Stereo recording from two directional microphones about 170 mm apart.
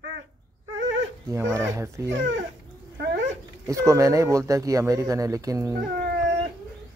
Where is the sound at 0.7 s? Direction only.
90° right.